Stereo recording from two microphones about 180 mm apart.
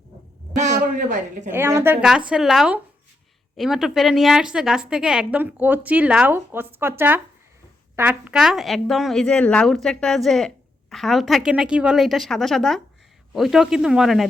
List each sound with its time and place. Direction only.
0.5 s speech: 40° right (ahead or behind)
1.5 s speech: 15° right (ahead or behind)